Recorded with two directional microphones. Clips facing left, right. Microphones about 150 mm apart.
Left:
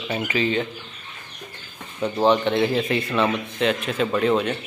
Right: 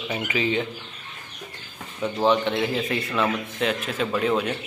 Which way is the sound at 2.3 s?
Centre (ahead or behind).